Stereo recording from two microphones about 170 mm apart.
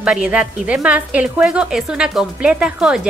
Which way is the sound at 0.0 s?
5° right (ahead or behind).